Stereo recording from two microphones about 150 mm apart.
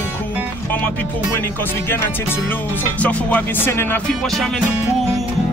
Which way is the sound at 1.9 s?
15° left (ahead or behind).